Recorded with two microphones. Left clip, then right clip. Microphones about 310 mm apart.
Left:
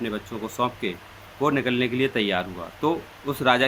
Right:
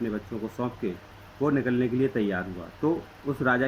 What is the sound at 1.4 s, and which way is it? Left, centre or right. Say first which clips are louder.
Speech: left 3 dB; centre.